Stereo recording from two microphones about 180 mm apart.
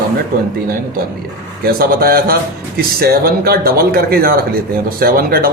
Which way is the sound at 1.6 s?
55° right (ahead or behind).